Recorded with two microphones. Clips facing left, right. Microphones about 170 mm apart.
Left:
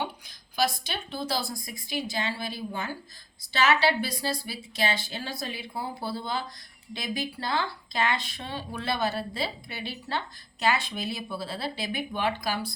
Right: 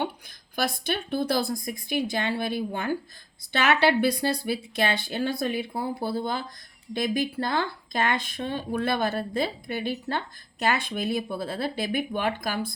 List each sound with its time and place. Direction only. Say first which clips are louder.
0.0 s speech: right 3 dB; 55° right (ahead or behind)